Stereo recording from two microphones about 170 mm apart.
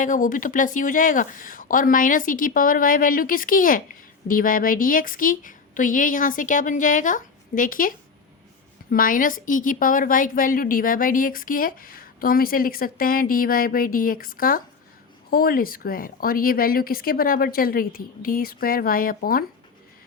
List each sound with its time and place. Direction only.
0.0 s a woman's voice: 50° left (ahead or behind)